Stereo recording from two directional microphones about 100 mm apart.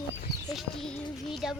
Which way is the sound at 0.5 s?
5° left (ahead or behind).